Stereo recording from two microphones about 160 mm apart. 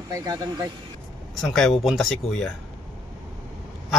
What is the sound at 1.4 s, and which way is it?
Speech, centre (ahead or behind).